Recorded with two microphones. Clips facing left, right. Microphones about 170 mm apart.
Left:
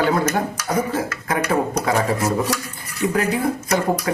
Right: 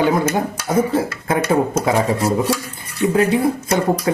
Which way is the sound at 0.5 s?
30° right (ahead or behind).